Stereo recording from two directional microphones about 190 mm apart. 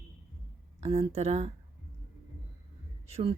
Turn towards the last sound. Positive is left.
turn(degrees=-35)  # may be behind; listen again after turning